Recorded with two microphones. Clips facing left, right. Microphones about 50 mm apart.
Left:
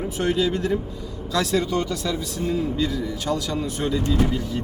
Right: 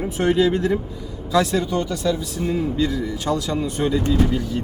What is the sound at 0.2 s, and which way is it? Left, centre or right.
Speech, right.